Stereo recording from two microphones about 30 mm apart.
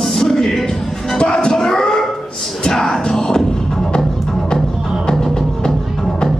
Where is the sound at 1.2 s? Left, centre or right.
Left.